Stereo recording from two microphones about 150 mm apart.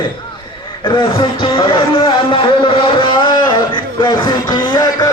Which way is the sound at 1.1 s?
35° left (ahead or behind).